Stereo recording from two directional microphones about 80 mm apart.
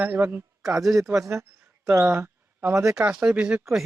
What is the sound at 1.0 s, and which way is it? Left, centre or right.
Speech, right.